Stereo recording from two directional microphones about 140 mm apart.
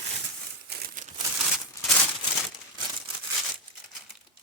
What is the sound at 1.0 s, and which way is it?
Crumpling, 65° right (ahead or behind).